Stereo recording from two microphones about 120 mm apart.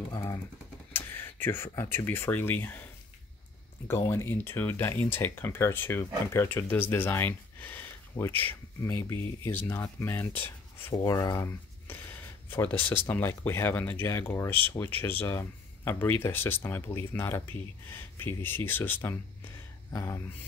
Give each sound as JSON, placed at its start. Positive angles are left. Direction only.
{"t": 0.1, "sound": "speech", "side_deg": 35}
{"t": 0.9, "sound": "speech", "side_deg": 20}
{"t": 4.1, "sound": "speech", "side_deg": 20}